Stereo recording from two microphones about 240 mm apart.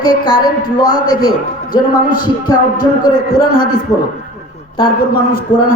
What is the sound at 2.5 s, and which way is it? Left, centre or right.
Speech, centre.